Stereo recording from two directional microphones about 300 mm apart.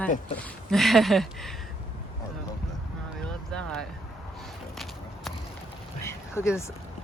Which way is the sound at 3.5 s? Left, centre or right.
Centre.